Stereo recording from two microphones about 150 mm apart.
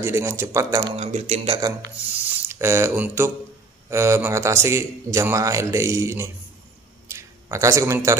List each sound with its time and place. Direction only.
0.0 s a man's voice: 20° right (ahead or behind)
0.9 s speech: 45° right (ahead or behind)
2.0 s a man's voice: 15° right (ahead or behind)
7.1 s a sound: 20° right (ahead or behind)